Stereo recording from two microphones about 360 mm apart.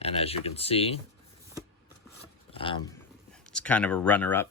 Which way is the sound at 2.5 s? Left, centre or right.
Centre.